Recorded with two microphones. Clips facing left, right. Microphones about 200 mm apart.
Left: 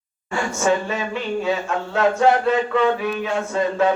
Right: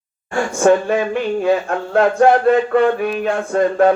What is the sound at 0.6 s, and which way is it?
Speech, 55° right (ahead or behind).